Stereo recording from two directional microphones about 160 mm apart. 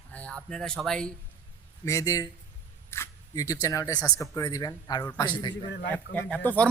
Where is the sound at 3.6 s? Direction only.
20° left (ahead or behind).